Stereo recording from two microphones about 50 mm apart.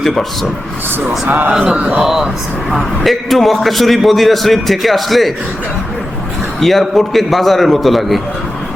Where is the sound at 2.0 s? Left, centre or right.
Centre.